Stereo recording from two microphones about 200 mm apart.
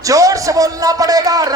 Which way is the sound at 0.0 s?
15° right (ahead or behind).